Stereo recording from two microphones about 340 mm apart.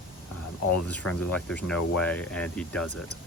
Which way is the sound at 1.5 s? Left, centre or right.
Centre.